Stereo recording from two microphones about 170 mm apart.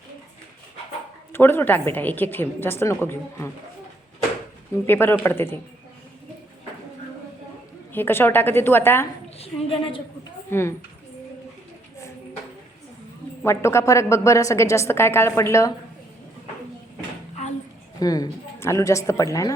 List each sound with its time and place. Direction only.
1.3 s a woman's voice: 15° left (ahead or behind)
4.9 s a woman's voice: 10° left (ahead or behind)
7.9 s a woman's voice: 10° left (ahead or behind)
9.6 s a woman's voice: 35° left (ahead or behind)
10.5 s a woman's voice: 15° left (ahead or behind)
13.4 s a woman's voice: 15° left (ahead or behind)
18.0 s speech: 20° left (ahead or behind)